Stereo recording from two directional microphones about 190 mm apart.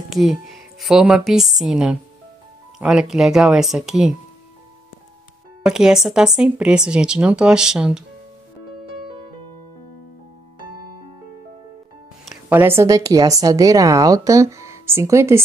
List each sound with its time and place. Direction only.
0.1 s speech: centre (ahead or behind)
5.7 s speech: 5° right (ahead or behind)
12.3 s speech: 10° right (ahead or behind)